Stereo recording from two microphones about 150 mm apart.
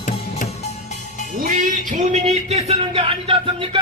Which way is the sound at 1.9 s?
45° right (ahead or behind).